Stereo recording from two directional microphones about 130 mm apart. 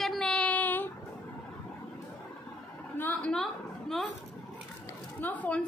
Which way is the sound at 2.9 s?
15° left (ahead or behind).